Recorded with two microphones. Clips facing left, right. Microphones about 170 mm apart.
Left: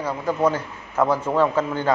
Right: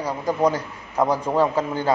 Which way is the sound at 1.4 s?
35° right (ahead or behind).